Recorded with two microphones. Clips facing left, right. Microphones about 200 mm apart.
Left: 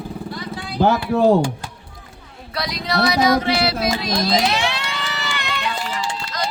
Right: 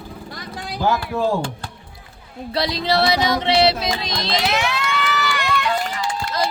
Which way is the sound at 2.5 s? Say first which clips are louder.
Right 3 dB; 25° right (ahead or behind).